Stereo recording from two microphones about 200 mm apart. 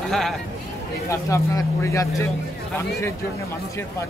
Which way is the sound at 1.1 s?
15° left (ahead or behind).